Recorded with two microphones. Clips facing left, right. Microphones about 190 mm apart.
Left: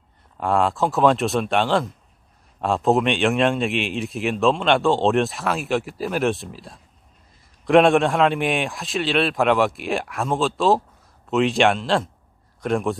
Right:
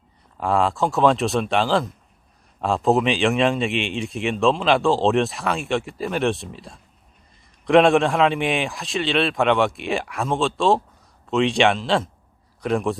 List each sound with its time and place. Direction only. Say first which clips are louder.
0.3 s a man's voice: even; centre (ahead or behind)